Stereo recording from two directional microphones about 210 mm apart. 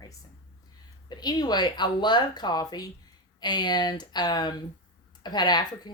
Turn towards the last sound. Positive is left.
turn(degrees=20)  # may be behind; listen again after turning